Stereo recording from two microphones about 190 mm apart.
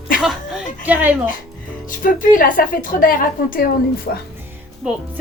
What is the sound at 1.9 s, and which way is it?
A woman's voice, 45° left (ahead or behind).